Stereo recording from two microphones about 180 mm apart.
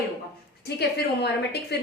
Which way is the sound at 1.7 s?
65° left (ahead or behind).